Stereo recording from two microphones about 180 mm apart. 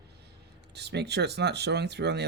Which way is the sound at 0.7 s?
70° right (ahead or behind).